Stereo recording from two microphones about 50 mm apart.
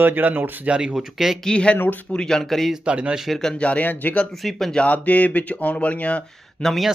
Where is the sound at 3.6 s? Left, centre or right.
Left.